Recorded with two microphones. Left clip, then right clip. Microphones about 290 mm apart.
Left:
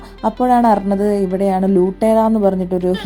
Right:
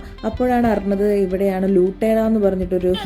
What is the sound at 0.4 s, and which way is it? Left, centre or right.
Speech, centre.